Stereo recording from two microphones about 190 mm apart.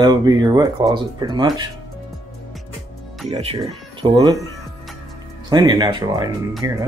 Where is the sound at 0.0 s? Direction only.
20° right (ahead or behind).